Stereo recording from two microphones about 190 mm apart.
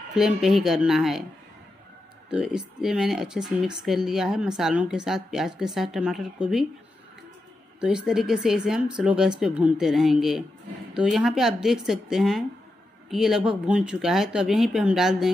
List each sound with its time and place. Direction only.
0.1 s speech: centre (ahead or behind)
2.3 s speech: 5° right (ahead or behind)
7.8 s speech: 5° right (ahead or behind)